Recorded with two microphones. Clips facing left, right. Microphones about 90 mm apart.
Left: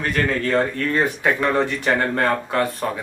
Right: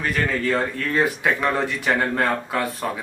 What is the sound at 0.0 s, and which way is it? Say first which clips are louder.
Speech: left 1 dB; centre (ahead or behind).